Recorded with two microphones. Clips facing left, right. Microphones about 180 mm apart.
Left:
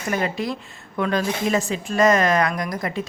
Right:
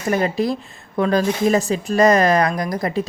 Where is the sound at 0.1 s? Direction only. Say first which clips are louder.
Right 5 dB; 35° right (ahead or behind).